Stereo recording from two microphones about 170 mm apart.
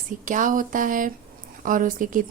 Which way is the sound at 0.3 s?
50° right (ahead or behind).